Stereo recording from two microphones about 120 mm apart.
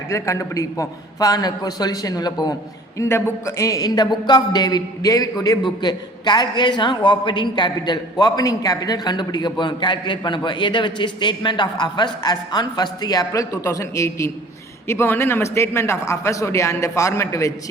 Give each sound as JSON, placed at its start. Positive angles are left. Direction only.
{"t": 0.1, "sound": "a man's voice", "side_deg": 25}
{"t": 3.0, "sound": "a man's voice", "side_deg": 20}